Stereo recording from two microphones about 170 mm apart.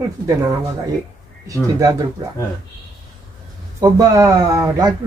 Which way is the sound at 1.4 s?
20° right (ahead or behind).